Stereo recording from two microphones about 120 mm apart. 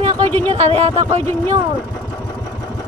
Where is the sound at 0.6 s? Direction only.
60° right (ahead or behind).